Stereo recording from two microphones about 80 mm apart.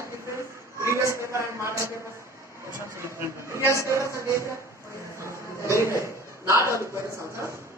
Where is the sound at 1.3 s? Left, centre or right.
Right.